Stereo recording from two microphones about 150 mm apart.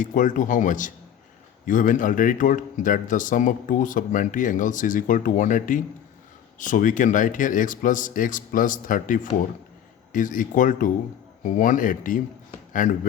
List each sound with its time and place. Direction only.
0.0 s a man's voice: 60° left (ahead or behind)